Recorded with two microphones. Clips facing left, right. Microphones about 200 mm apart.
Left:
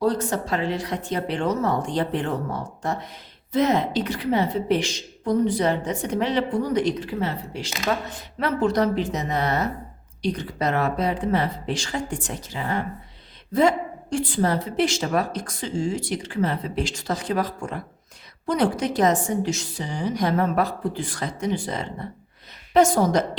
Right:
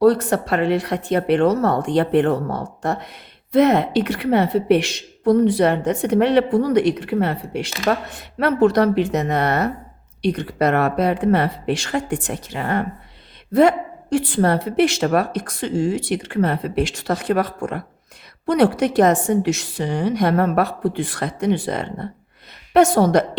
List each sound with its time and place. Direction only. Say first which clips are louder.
0.0 s a woman's voice: right 7 dB; 65° right (ahead or behind)